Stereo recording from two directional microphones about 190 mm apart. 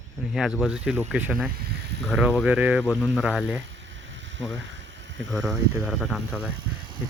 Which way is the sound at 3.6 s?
75° right (ahead or behind).